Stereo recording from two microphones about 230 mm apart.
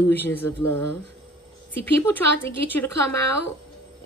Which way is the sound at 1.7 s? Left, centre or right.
Centre.